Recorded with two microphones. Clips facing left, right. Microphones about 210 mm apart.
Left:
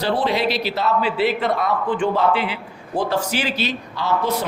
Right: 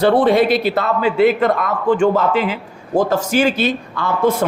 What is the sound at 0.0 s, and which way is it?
A man's voice, 50° right (ahead or behind).